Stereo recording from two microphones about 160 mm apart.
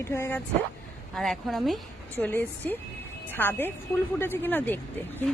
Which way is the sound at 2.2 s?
10° left (ahead or behind).